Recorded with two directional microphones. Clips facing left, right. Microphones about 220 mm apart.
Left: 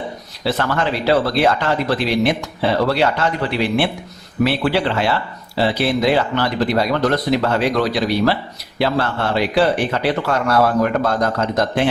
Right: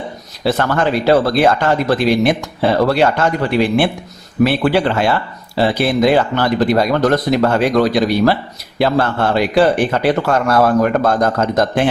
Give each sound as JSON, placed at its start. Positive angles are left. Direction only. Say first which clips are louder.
{"t": 0.4, "sound": "speech", "louder": "right 4 dB", "side_deg": -50}